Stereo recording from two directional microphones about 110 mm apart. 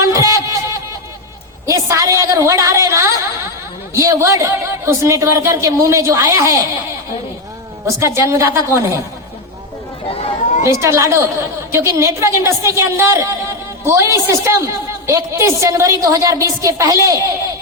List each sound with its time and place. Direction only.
0.0 s music: 30° right (ahead or behind)
1.6 s a woman's voice: 30° right (ahead or behind)
7.9 s a woman's voice: 25° right (ahead or behind)
10.1 s a sound: 65° left (ahead or behind)
10.6 s a woman's voice: 25° right (ahead or behind)